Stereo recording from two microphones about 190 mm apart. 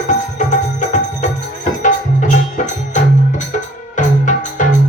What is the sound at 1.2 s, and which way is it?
Music, 40° left (ahead or behind).